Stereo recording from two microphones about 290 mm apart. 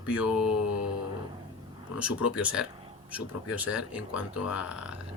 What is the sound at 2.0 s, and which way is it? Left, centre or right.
Speech, centre.